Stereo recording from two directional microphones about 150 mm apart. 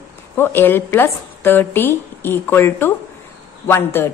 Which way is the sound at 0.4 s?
15° left (ahead or behind).